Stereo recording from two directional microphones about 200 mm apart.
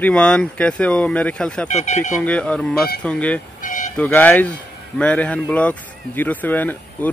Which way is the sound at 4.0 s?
10° left (ahead or behind).